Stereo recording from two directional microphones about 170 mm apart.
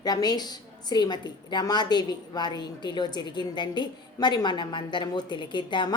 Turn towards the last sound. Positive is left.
turn(degrees=25)  # may be behind; listen again after turning